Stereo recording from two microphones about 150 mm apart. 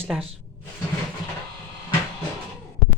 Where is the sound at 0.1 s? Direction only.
5° right (ahead or behind).